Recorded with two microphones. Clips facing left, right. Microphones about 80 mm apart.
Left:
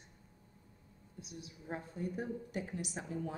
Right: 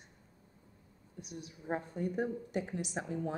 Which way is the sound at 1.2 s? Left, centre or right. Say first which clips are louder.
Right 5 dB; right.